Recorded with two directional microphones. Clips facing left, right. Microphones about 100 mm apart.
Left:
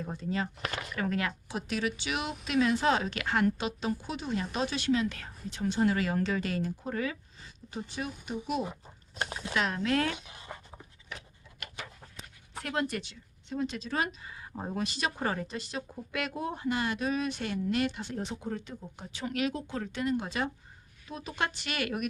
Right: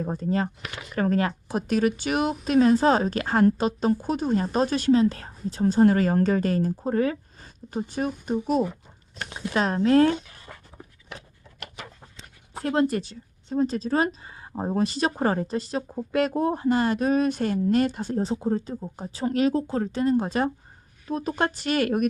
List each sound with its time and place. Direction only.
0.0 s speech: 45° right (ahead or behind)
10.2 s writing: 20° left (ahead or behind)
12.5 s speech: 35° right (ahead or behind)